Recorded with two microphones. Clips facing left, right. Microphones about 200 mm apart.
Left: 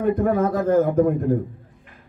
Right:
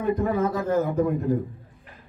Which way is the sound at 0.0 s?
50° left (ahead or behind).